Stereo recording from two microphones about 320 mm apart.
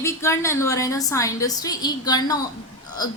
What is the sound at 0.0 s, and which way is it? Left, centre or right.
A woman's voice, centre.